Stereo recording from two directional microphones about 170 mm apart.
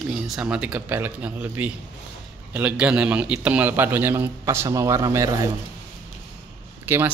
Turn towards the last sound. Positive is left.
turn(degrees=-10)  # may be behind; listen again after turning